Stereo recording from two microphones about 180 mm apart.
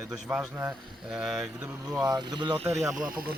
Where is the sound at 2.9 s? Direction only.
50° right (ahead or behind).